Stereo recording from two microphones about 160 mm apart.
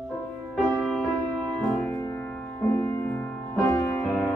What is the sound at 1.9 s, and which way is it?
Music, 15° left (ahead or behind).